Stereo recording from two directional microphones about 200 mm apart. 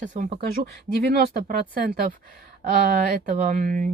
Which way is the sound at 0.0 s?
40° right (ahead or behind).